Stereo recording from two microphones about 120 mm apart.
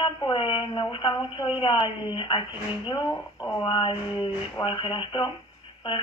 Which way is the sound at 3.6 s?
45° left (ahead or behind).